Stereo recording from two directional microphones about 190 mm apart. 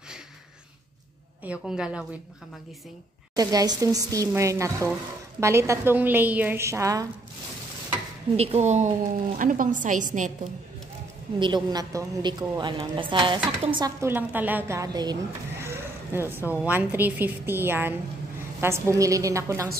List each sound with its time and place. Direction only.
1.4 s a woman's voice: 5° right (ahead or behind)
3.3 s a woman's voice: 20° right (ahead or behind)
8.4 s a woman's voice: 35° right (ahead or behind)
11.3 s a woman's voice: 25° right (ahead or behind)
14.0 s a woman's voice: 10° right (ahead or behind)
15.6 s a sound: 15° right (ahead or behind)
16.6 s a woman's voice: 10° right (ahead or behind)